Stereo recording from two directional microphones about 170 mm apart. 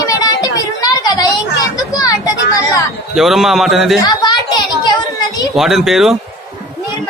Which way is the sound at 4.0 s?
25° left (ahead or behind).